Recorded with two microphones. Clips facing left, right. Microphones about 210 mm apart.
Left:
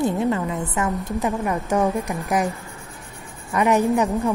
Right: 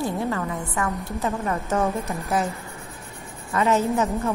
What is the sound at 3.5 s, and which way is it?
Speech, 15° left (ahead or behind).